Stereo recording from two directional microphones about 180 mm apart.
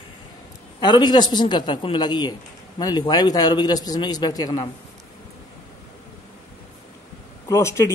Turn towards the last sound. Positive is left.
turn(degrees=15)  # may be behind; listen again after turning